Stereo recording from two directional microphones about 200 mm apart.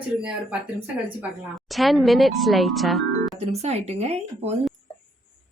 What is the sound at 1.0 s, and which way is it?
A woman's voice, 5° right (ahead or behind).